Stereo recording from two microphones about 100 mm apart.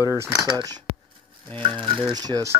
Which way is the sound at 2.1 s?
40° right (ahead or behind).